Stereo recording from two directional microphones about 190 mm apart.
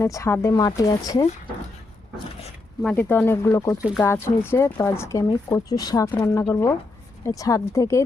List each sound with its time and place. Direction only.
0.0 s speech: 15° left (ahead or behind)
2.8 s speech: 10° left (ahead or behind)